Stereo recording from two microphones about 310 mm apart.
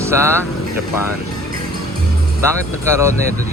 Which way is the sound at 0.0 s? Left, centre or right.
Centre.